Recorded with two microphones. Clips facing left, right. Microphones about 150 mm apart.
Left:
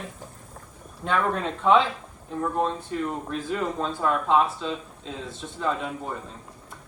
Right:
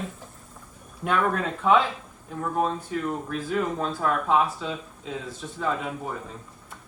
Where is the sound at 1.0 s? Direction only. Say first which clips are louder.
Right 1 dB; 5° right (ahead or behind).